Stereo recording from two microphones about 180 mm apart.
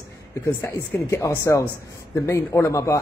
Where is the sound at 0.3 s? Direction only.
15° left (ahead or behind).